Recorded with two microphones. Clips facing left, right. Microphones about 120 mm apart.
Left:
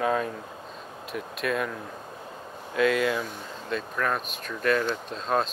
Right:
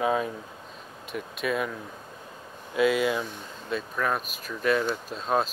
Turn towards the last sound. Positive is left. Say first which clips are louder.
# even
turn(degrees=-5)  # may be behind; listen again after turning